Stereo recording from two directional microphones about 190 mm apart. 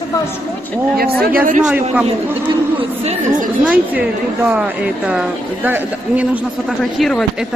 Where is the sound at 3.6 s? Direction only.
10° right (ahead or behind).